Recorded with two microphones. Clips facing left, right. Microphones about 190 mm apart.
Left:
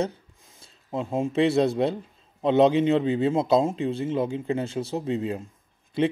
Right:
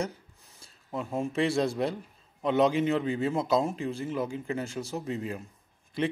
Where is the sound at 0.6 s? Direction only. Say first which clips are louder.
Left 5 dB; 25° left (ahead or behind).